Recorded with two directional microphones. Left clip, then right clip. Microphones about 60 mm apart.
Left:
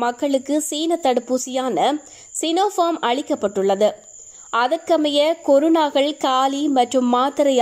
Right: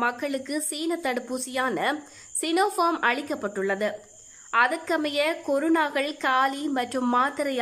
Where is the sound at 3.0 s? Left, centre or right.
Left.